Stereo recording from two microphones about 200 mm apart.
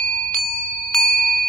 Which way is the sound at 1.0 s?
Centre (ahead or behind).